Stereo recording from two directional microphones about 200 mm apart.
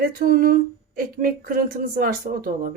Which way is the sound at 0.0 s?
45° right (ahead or behind).